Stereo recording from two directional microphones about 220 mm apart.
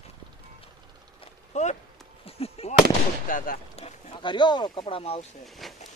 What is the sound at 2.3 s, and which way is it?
Fireworks, 25° left (ahead or behind).